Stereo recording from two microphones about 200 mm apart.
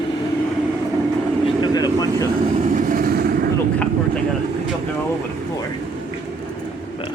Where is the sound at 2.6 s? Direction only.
40° right (ahead or behind).